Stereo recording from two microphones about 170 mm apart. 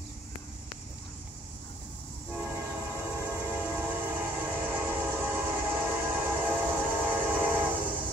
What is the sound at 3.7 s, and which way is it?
Train, 10° right (ahead or behind).